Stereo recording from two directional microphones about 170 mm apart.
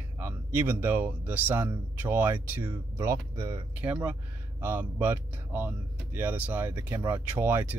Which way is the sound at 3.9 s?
5° right (ahead or behind).